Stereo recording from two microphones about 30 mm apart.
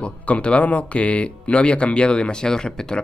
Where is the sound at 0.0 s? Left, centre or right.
Left.